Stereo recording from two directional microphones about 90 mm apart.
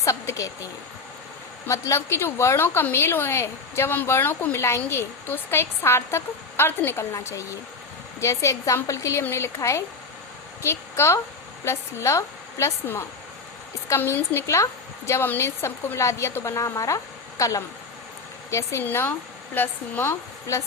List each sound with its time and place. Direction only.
0.0 s a woman's voice: 35° left (ahead or behind)
18.8 s a woman's voice: 25° left (ahead or behind)